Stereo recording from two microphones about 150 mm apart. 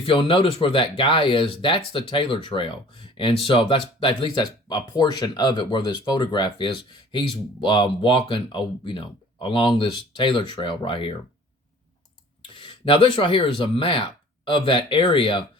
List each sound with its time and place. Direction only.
0.0 s speech: 40° left (ahead or behind)
12.5 s speech: 35° left (ahead or behind)